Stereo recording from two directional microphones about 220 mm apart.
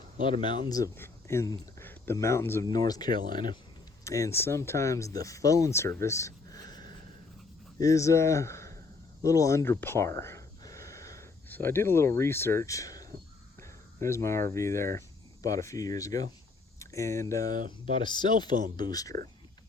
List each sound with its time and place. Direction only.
0.3 s speech: 20° left (ahead or behind)
3.1 s speech: 40° right (ahead or behind)
4.0 s speech: 15° left (ahead or behind)